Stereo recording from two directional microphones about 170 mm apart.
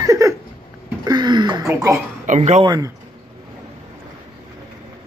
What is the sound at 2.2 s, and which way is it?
Speech, 45° right (ahead or behind).